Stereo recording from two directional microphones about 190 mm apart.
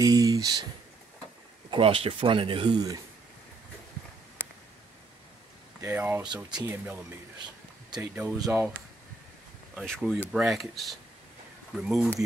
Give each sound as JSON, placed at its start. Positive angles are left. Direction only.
{"t": 0.0, "sound": "a sound", "side_deg": -20}
{"t": 1.7, "sound": "speech", "side_deg": -30}
{"t": 5.8, "sound": "speech", "side_deg": -15}
{"t": 8.0, "sound": "speech", "side_deg": -5}
{"t": 9.8, "sound": "speech", "side_deg": 0}